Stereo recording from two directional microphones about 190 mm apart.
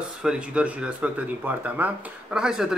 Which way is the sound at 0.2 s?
5° right (ahead or behind).